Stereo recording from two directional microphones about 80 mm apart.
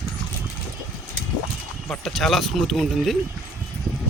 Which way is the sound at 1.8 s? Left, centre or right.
Centre.